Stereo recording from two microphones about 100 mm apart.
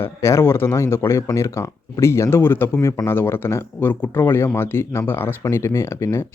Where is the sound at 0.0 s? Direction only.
30° left (ahead or behind).